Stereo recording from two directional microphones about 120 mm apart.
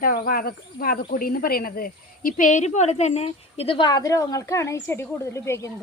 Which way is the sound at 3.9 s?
30° left (ahead or behind).